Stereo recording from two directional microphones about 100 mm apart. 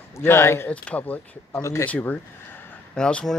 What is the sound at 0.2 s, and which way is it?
Speech, 25° left (ahead or behind).